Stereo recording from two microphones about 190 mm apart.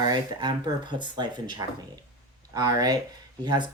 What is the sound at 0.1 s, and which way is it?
Speech, 25° right (ahead or behind).